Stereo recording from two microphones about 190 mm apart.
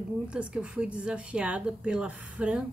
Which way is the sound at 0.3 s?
5° right (ahead or behind).